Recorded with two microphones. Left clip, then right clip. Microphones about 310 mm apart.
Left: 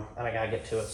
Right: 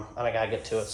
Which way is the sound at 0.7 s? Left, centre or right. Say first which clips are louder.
Right 2 dB; right.